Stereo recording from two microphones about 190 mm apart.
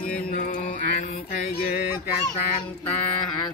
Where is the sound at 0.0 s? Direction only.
45° left (ahead or behind).